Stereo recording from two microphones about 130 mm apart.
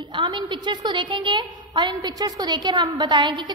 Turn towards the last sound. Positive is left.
turn(degrees=-35)  # may be behind; listen again after turning